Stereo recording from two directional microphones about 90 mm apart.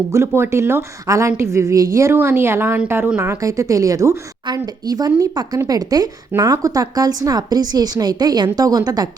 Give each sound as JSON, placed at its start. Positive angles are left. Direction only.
{"t": 0.1, "sound": "a woman's voice", "side_deg": -30}
{"t": 4.5, "sound": "a woman's voice", "side_deg": -45}